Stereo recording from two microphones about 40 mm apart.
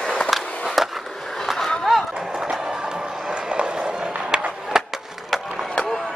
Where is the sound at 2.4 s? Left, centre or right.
Centre.